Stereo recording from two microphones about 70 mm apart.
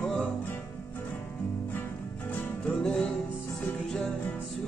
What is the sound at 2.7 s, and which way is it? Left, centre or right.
Music, centre.